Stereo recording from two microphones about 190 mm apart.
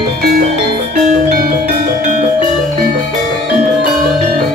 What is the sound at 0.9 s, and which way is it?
Music, 40° right (ahead or behind).